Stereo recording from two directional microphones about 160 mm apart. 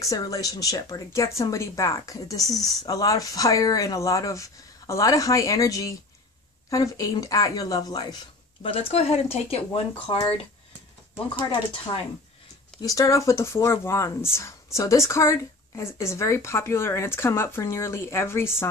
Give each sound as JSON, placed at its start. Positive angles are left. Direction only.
{"t": 0.0, "sound": "speech", "side_deg": 20}
{"t": 2.4, "sound": "speech", "side_deg": 0}
{"t": 2.8, "sound": "speech", "side_deg": 25}
{"t": 8.6, "sound": "speech", "side_deg": 35}
{"t": 11.9, "sound": "a woman's voice", "side_deg": 30}